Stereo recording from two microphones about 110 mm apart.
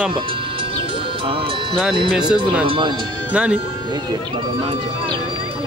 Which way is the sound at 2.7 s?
50° right (ahead or behind).